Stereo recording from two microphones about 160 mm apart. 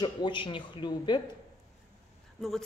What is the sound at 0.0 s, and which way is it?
Speech, 30° left (ahead or behind).